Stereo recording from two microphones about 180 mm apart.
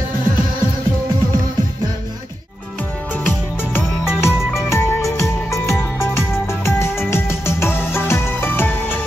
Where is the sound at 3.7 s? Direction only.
15° left (ahead or behind).